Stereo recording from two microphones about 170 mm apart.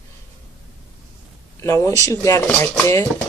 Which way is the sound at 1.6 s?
15° left (ahead or behind).